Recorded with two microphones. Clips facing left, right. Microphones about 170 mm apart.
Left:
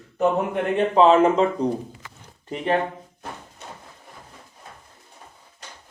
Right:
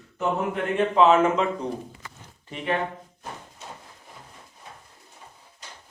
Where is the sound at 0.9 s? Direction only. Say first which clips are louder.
Left 3 dB; 35° left (ahead or behind).